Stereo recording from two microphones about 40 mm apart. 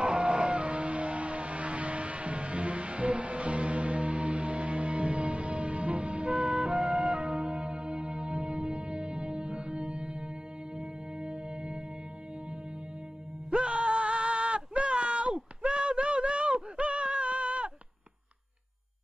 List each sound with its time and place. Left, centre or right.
0.0 s music: right
6.4 s music: centre
13.5 s music: right